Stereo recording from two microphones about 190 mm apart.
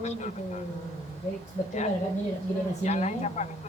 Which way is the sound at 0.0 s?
35° left (ahead or behind).